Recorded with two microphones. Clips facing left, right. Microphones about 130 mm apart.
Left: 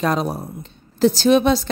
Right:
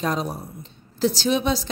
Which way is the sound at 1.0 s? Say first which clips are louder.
Left 7 dB; 55° left (ahead or behind).